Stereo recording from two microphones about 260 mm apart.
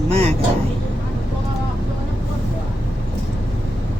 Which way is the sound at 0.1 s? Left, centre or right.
Right.